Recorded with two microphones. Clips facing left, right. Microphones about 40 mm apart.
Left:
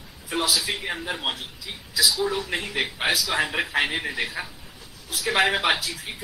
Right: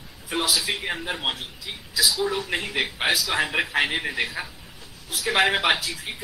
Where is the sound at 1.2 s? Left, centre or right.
Right.